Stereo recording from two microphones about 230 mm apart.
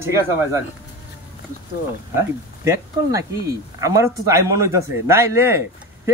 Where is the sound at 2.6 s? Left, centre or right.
Centre.